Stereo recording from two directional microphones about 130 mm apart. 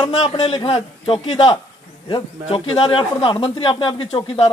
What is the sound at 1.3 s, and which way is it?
A man's voice, 40° left (ahead or behind).